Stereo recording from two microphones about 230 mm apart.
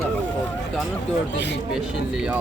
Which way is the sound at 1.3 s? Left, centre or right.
Left.